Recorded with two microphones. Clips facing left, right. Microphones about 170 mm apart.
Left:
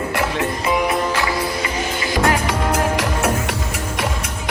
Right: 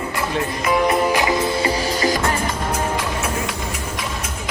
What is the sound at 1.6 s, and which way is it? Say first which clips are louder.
Music: right 4 dB; 35° right (ahead or behind).